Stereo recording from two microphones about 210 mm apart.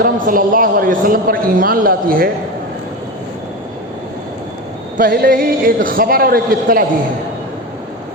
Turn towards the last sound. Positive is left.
turn(degrees=-45)  # may be behind; listen again after turning